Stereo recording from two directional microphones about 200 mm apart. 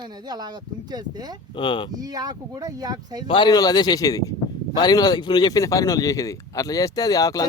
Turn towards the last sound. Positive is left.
turn(degrees=15)  # may be behind; listen again after turning